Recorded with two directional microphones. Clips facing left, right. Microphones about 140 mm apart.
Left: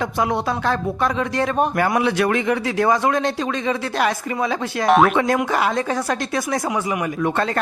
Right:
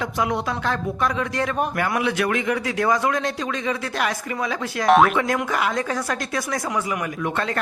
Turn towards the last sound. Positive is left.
turn(degrees=30)  # may be behind; listen again after turning